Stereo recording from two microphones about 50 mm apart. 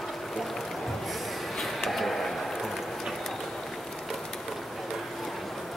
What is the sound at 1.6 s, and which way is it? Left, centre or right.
Vehicle, centre.